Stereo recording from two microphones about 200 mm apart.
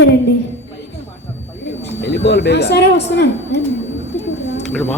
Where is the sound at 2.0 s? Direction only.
60° left (ahead or behind).